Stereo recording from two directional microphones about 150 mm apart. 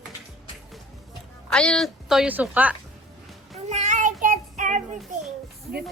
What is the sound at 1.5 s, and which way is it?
Speech, 5° left (ahead or behind).